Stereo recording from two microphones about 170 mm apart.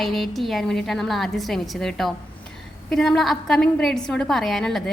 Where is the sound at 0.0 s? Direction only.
Centre (ahead or behind).